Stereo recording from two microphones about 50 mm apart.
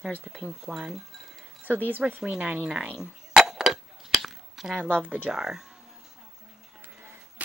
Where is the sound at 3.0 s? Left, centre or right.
Centre.